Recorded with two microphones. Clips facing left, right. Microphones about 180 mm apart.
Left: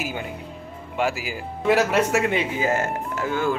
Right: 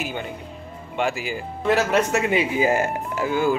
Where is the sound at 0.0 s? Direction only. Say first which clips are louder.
Even; 5° left (ahead or behind).